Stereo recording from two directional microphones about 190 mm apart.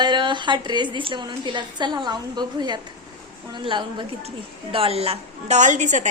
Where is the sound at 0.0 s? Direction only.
25° right (ahead or behind).